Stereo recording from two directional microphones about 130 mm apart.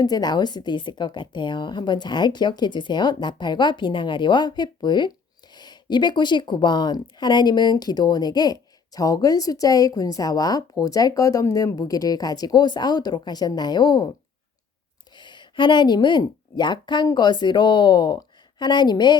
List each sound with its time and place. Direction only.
0.0 s a woman's voice: 30° left (ahead or behind)
15.1 s speech: 35° left (ahead or behind)